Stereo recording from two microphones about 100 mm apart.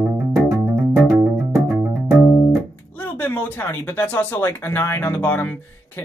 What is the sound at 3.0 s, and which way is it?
Speech, 20° left (ahead or behind).